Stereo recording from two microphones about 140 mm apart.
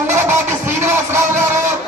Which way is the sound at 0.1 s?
15° right (ahead or behind).